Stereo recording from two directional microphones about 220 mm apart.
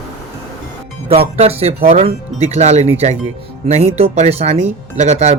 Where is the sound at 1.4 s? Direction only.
25° right (ahead or behind).